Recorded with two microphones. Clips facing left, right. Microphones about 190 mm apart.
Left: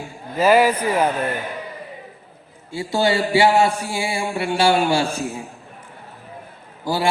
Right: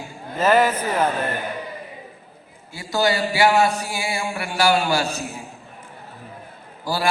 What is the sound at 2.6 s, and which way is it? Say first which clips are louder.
A man's voice: left 2 dB; 25° left (ahead or behind).